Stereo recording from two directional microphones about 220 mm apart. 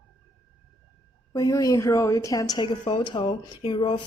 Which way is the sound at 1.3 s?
15° left (ahead or behind).